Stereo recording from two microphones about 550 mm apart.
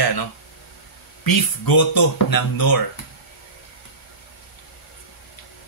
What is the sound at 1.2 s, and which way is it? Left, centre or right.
Speech, left.